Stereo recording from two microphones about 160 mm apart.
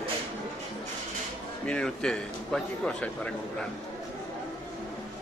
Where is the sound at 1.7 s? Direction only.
5° left (ahead or behind).